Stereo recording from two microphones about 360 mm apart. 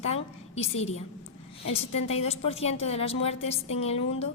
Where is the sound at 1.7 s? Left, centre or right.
Centre.